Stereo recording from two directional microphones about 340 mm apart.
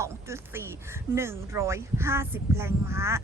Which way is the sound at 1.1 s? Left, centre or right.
Centre.